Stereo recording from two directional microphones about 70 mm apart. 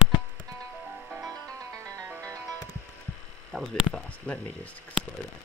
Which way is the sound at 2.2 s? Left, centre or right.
Right.